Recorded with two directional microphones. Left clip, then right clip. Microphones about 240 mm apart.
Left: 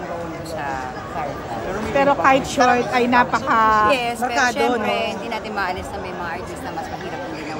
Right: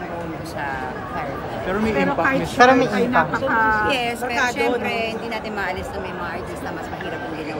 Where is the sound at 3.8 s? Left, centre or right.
Centre.